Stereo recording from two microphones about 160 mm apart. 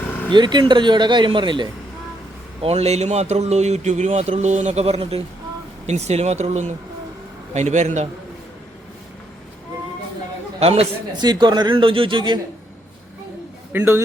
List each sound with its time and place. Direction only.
0.3 s speech: 30° right (ahead or behind)
2.6 s a man's voice: 40° right (ahead or behind)
10.6 s a man's voice: 40° right (ahead or behind)
11.2 s speech: 25° right (ahead or behind)
13.7 s a man's voice: 15° right (ahead or behind)